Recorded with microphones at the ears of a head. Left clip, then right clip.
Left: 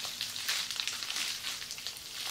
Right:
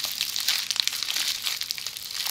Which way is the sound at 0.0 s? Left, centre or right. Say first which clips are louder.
Right 9 dB; right.